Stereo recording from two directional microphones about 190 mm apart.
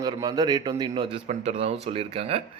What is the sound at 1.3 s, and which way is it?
Speech, 35° right (ahead or behind).